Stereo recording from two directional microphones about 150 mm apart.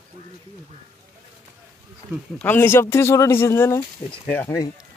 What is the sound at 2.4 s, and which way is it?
Speech, 15° left (ahead or behind).